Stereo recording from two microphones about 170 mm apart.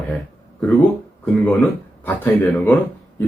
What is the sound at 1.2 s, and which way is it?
Speech, 10° left (ahead or behind).